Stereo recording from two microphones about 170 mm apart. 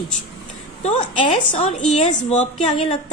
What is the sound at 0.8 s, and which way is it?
A woman's voice, 40° left (ahead or behind).